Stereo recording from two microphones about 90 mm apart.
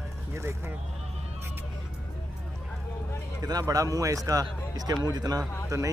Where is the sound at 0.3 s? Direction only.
30° right (ahead or behind).